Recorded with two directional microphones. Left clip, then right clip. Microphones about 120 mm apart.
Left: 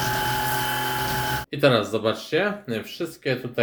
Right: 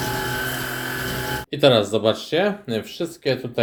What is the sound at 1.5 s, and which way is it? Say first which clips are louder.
A man's voice: right 4 dB; 25° right (ahead or behind).